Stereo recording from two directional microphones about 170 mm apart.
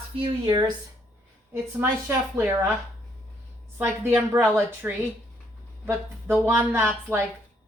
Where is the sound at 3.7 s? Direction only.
10° right (ahead or behind).